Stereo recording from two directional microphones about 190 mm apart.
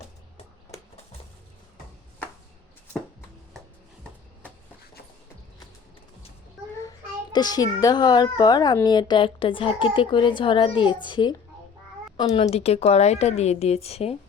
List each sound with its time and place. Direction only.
7.3 s a child's voice: 20° left (ahead or behind)